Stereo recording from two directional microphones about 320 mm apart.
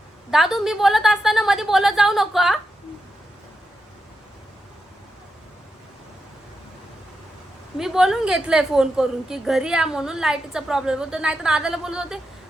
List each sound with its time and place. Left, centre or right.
0.3 s a woman's voice: centre
7.8 s a woman's voice: centre